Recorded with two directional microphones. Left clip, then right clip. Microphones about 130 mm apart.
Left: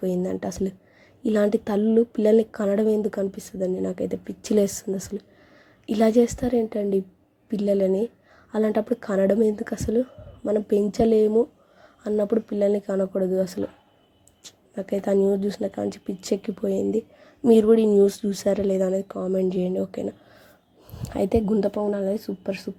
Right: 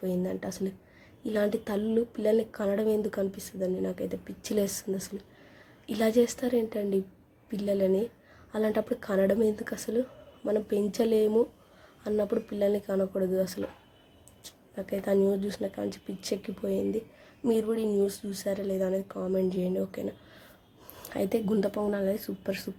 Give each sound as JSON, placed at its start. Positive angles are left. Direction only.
{"t": 0.0, "sound": "speech", "side_deg": 50}
{"t": 17.5, "sound": "speech", "side_deg": 60}
{"t": 21.1, "sound": "speech", "side_deg": 35}
{"t": 21.8, "sound": "speech", "side_deg": 20}